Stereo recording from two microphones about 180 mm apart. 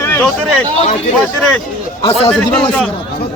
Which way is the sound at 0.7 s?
35° left (ahead or behind).